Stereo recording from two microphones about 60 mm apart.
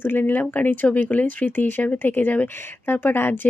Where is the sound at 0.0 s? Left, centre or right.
Left.